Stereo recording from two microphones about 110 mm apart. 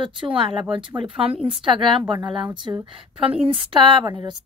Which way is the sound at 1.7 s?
50° right (ahead or behind).